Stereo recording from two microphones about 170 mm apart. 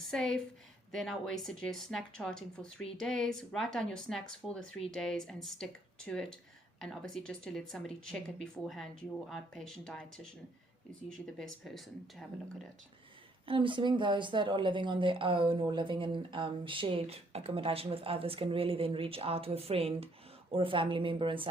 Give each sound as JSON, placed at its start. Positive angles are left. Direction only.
{"t": 0.1, "sound": "a woman's voice", "side_deg": 5}
{"t": 6.7, "sound": "speech", "side_deg": 0}
{"t": 11.3, "sound": "speech", "side_deg": 0}
{"t": 13.4, "sound": "speech", "side_deg": -30}